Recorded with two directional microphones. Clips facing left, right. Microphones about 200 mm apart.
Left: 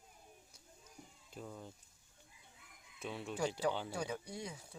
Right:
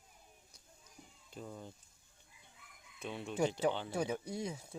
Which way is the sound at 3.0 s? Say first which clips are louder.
Right 1 dB; 5° left (ahead or behind).